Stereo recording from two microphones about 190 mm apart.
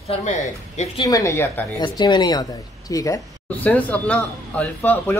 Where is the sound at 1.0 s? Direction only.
15° left (ahead or behind).